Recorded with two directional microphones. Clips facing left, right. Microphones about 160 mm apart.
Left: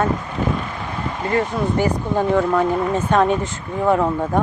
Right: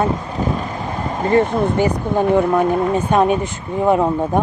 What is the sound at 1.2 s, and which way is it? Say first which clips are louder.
Speech: right 5 dB; 25° right (ahead or behind).